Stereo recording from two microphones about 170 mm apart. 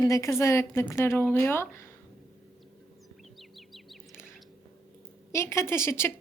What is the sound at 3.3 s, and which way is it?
Chirp, centre (ahead or behind).